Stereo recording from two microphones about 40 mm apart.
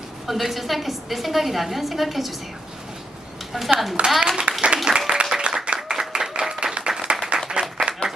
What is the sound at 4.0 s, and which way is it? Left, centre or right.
Speech, right.